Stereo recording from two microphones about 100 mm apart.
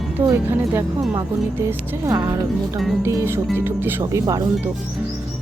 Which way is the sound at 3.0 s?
30° right (ahead or behind).